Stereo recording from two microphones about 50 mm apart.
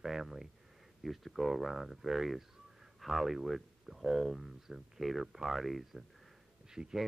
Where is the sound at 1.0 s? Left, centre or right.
Centre.